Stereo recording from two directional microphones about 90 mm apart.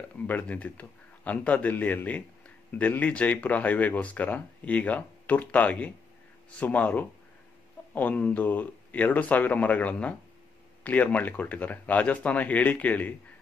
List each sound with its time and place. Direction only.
0.3 s speech: 15° left (ahead or behind)